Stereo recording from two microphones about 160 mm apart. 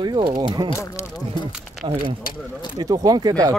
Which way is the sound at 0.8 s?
20° left (ahead or behind).